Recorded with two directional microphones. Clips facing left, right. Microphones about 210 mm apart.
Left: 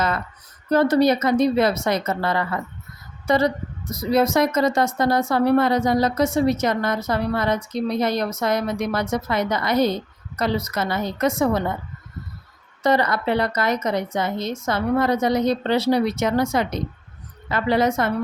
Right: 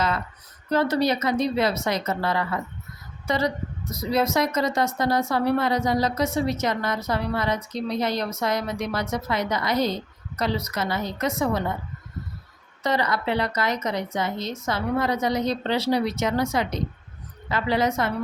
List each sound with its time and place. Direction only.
0.7 s a woman's voice: 50° left (ahead or behind)
12.8 s a woman's voice: 50° left (ahead or behind)